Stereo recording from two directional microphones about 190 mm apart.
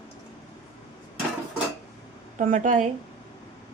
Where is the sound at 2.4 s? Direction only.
45° right (ahead or behind).